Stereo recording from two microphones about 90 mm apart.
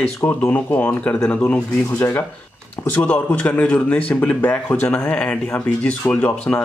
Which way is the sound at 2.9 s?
15° left (ahead or behind).